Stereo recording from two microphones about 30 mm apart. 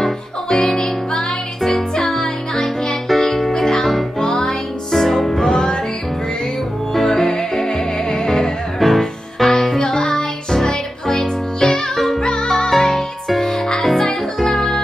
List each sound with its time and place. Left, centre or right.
0.0 s music: centre
1.6 s music: centre
2.2 s music: left
3.1 s music: centre
4.2 s music: centre
5.5 s music: left
6.9 s music: centre
8.3 s music: centre
9.8 s music: left
11.9 s music: centre
12.2 s music: left
12.4 s music: centre